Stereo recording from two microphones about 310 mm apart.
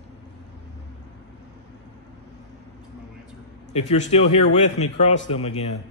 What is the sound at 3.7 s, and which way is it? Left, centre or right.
Speech, centre.